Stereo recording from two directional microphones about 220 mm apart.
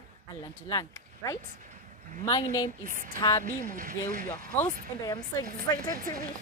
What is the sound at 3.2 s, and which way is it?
Speech, 20° left (ahead or behind).